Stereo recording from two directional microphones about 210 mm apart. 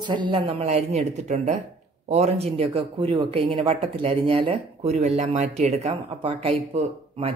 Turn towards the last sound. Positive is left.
turn(degrees=-25)  # may be behind; listen again after turning